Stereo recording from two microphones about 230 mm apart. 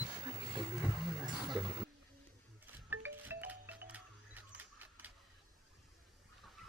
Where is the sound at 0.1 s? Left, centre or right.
Centre.